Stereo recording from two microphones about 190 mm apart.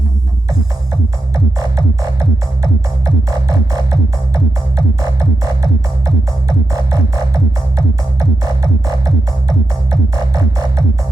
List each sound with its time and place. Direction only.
1.5 s music: 20° right (ahead or behind)
6.9 s music: 15° right (ahead or behind)